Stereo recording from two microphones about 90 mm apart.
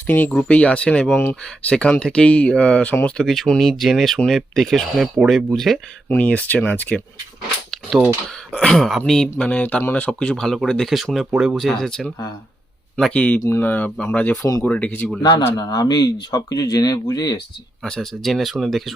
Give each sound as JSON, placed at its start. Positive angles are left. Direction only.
{"t": 0.1, "sound": "speech", "side_deg": 15}
{"t": 1.1, "sound": "speech", "side_deg": 25}
{"t": 1.7, "sound": "speech", "side_deg": 10}
{"t": 3.2, "sound": "speech", "side_deg": 5}
{"t": 6.1, "sound": "speech", "side_deg": 15}
{"t": 7.7, "sound": "a sound", "side_deg": -5}
{"t": 8.5, "sound": "speech", "side_deg": 5}
{"t": 9.4, "sound": "speech", "side_deg": 15}
{"t": 13.1, "sound": "speech", "side_deg": 20}
{"t": 15.2, "sound": "speech", "side_deg": 45}
{"t": 17.8, "sound": "speech", "side_deg": 5}